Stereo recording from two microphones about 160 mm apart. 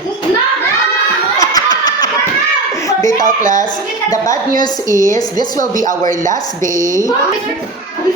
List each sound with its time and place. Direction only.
1.4 s a sound: 25° left (ahead or behind)
3.2 s a woman's voice: 55° right (ahead or behind)
4.1 s a woman's voice: 25° left (ahead or behind)